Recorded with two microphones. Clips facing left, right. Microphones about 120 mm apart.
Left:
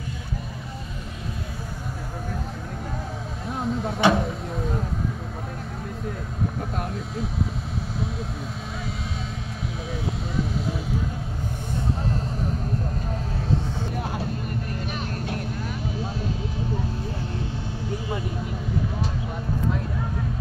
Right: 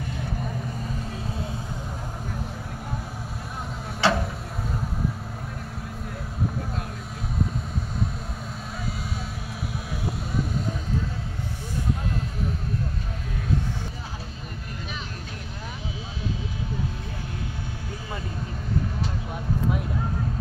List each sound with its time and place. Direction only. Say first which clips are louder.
4.0 s vehicle: left 3 dB; 20° left (ahead or behind)